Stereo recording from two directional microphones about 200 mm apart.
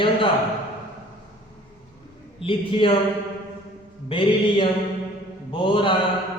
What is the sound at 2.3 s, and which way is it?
Speech, 25° left (ahead or behind).